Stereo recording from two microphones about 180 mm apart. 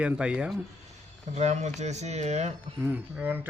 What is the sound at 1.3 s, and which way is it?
Speech, 40° right (ahead or behind).